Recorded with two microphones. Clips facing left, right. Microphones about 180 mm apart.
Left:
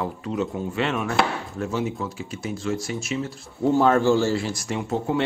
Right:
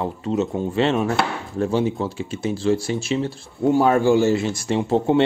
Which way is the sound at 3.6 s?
15° right (ahead or behind).